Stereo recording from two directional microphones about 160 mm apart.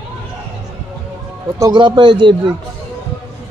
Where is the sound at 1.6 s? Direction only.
25° right (ahead or behind).